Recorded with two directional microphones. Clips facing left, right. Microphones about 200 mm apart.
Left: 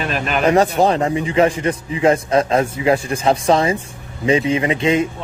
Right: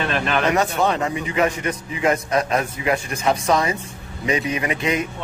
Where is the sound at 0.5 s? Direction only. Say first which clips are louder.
Left 8 dB; 35° left (ahead or behind).